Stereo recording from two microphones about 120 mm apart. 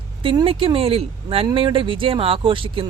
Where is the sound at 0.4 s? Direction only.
50° right (ahead or behind).